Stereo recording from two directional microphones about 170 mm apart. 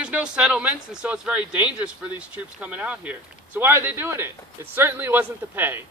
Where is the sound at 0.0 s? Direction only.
5° right (ahead or behind).